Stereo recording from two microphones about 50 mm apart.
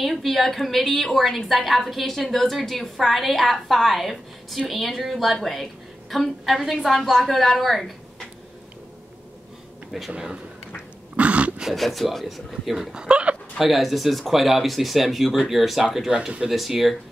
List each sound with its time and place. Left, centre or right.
0.0 s a woman's voice: centre
10.1 s speech: centre
11.1 s dog: right
11.7 s a woman's voice: centre; by 13.4 s right
13.6 s a woman's voice: centre
16.1 s speech: centre
16.4 s a woman's voice: centre